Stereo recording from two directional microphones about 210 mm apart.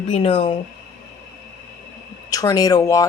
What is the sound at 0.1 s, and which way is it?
Speech, 25° left (ahead or behind).